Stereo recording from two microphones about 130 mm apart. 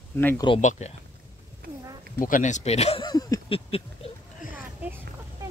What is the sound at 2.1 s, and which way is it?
Speech, 90° left.